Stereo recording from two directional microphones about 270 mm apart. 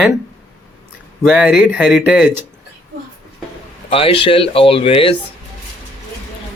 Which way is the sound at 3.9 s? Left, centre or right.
Centre.